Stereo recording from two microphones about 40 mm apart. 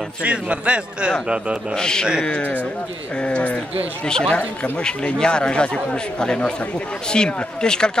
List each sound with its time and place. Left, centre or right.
0.2 s a man's voice: right
1.8 s speech: centre
3.2 s speech: left
4.0 s speech: centre